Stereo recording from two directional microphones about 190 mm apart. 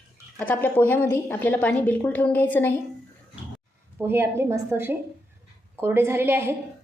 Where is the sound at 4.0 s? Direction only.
10° right (ahead or behind).